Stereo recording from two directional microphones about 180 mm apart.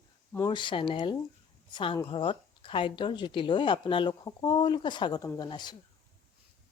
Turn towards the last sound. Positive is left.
turn(degrees=25)  # may be behind; listen again after turning